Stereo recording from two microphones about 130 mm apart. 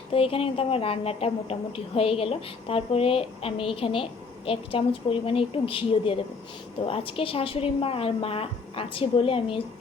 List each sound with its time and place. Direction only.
0.1 s a woman's voice: 45° left (ahead or behind)